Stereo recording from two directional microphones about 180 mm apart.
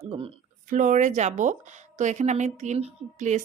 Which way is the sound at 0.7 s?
45° right (ahead or behind).